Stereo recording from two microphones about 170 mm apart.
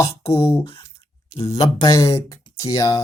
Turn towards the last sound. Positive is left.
turn(degrees=20)  # may be behind; listen again after turning